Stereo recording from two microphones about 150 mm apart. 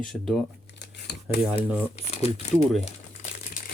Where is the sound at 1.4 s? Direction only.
10° right (ahead or behind).